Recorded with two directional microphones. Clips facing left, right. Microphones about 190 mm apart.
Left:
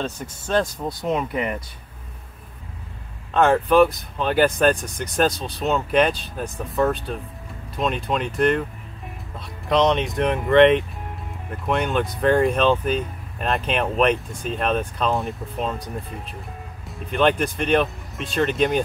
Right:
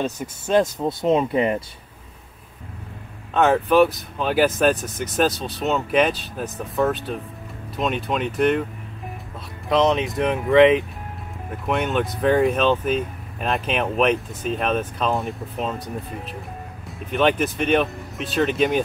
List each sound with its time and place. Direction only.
0.5 s speech: 20° right (ahead or behind)
3.3 s speech: 5° right (ahead or behind)
9.7 s speech: centre (ahead or behind)
16.8 s speech: centre (ahead or behind)